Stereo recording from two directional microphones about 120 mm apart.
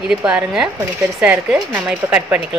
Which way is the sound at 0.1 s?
10° right (ahead or behind).